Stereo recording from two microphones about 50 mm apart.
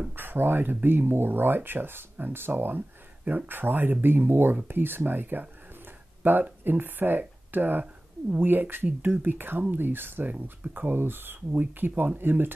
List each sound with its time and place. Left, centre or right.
0.1 s speech: right